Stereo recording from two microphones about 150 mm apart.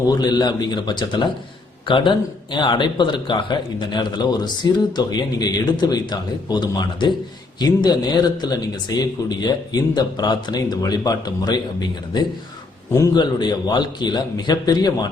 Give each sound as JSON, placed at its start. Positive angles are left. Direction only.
{"t": 0.1, "sound": "speech", "side_deg": 25}